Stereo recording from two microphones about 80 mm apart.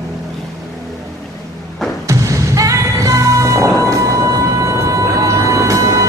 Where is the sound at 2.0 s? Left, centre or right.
Right.